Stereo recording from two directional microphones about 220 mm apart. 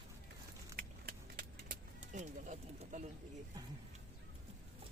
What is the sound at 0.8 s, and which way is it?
Vehicle, 40° right (ahead or behind).